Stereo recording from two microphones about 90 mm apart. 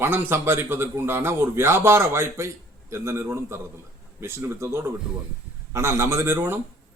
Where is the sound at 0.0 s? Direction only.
25° right (ahead or behind).